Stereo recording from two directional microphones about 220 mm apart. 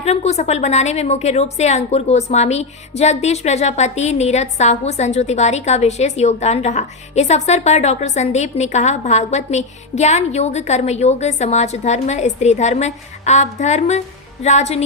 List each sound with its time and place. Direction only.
0.0 s a woman's voice: 30° left (ahead or behind)